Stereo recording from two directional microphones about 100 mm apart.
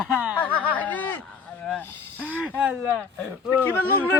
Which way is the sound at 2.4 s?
15° right (ahead or behind).